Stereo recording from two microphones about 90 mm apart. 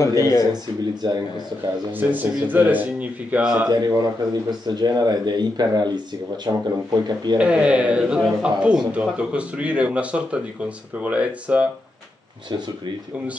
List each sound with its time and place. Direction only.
0.0 s speech: 35° left (ahead or behind)
1.0 s speech: 55° right (ahead or behind)
1.9 s speech: 20° right (ahead or behind)
3.6 s speech: 50° right (ahead or behind)
7.3 s speech: 10° right (ahead or behind)